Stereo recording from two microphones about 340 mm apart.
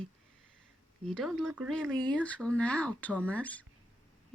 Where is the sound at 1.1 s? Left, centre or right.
Centre.